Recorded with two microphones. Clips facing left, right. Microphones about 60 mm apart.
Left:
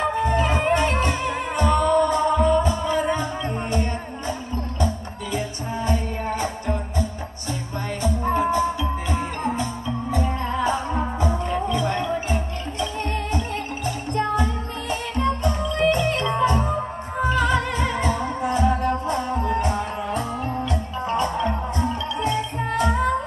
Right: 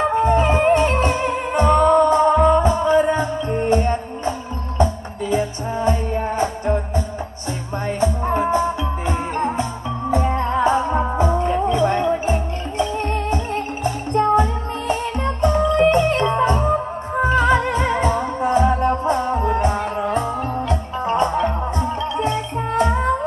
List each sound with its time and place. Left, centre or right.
0.0 s music: right